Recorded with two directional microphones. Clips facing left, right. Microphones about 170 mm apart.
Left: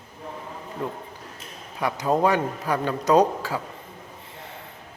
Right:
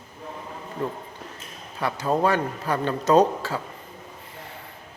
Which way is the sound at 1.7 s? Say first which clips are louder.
Left 1 dB; 15° left (ahead or behind).